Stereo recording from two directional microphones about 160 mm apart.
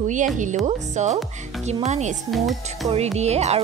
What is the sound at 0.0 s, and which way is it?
Speech, 50° right (ahead or behind).